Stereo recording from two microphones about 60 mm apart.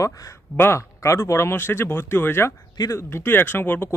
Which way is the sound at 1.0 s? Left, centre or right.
Left.